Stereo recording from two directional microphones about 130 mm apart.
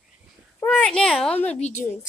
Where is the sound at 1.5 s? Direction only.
60° left (ahead or behind).